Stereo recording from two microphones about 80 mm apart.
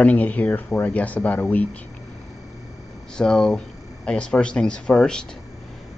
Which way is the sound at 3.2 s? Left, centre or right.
Centre.